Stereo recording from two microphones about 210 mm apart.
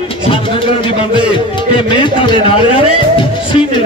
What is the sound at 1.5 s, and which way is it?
Music, 25° left (ahead or behind).